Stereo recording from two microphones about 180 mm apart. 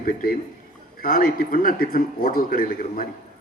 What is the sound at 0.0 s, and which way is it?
Speech, 50° left (ahead or behind).